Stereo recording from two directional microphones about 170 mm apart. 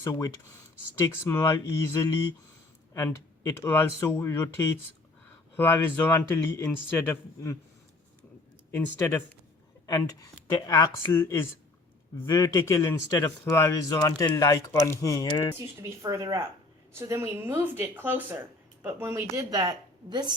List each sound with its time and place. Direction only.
0.0 s a man's voice: 20° left (ahead or behind)
3.6 s a man's voice: 15° left (ahead or behind)
8.7 s a man's voice: 15° left (ahead or behind)
15.8 s speech: 20° right (ahead or behind)